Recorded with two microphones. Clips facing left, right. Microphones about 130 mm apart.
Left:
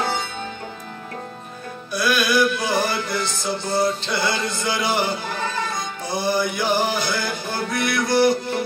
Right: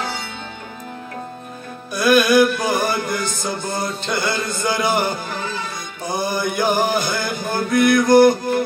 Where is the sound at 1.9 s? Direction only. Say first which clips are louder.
Right 6 dB; 50° right (ahead or behind).